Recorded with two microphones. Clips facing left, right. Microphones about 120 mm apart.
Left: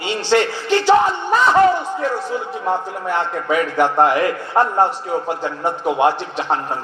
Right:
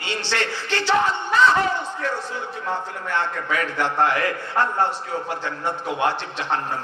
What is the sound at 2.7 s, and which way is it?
A man's voice, 15° left (ahead or behind).